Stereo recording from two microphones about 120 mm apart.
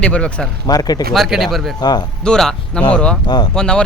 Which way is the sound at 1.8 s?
35° left (ahead or behind).